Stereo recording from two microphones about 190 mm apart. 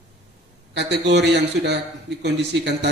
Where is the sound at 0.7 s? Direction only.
65° right (ahead or behind).